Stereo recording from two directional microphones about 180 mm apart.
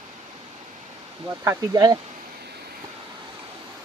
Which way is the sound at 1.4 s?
15° right (ahead or behind).